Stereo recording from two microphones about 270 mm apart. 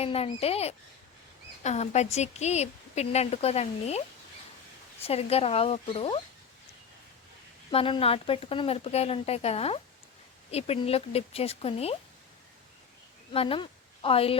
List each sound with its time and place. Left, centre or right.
0.0 s a woman's voice: left
5.0 s a woman's voice: left
7.7 s a woman's voice: centre
13.3 s speech: left